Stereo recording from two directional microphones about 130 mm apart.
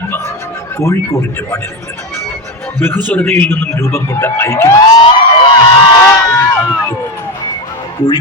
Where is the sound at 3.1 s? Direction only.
15° left (ahead or behind).